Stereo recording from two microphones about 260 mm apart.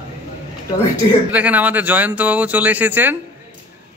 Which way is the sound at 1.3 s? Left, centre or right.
Centre.